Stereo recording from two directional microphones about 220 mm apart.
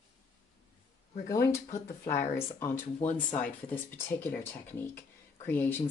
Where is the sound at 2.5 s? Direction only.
10° left (ahead or behind).